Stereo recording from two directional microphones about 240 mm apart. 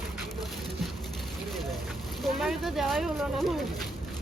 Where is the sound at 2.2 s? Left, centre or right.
Centre.